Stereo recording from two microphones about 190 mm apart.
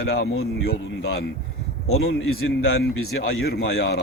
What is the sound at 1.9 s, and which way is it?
Speech, 90° left.